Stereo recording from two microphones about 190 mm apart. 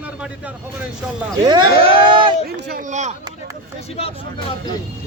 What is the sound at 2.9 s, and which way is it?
Speech, 40° right (ahead or behind).